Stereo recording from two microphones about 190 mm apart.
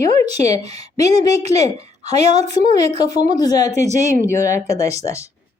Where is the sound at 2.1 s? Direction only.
35° right (ahead or behind).